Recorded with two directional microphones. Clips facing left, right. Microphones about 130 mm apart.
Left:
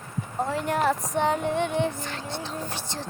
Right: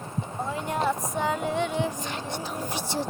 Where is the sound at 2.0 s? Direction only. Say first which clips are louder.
Right 1 dB; 15° right (ahead or behind).